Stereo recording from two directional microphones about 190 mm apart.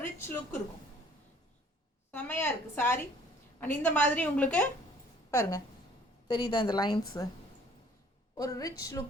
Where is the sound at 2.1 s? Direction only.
10° left (ahead or behind).